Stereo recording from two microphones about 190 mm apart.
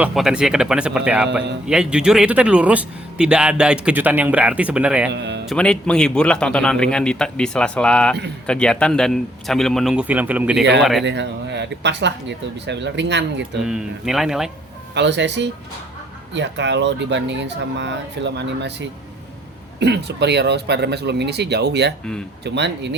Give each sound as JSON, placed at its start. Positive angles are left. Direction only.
{"t": 0.0, "sound": "a man's voice", "side_deg": 0}
{"t": 5.1, "sound": "speech", "side_deg": -70}
{"t": 5.5, "sound": "a man's voice", "side_deg": 5}
{"t": 11.0, "sound": "speech", "side_deg": -65}
{"t": 13.7, "sound": "a man's voice", "side_deg": -5}
{"t": 14.9, "sound": "speech", "side_deg": -65}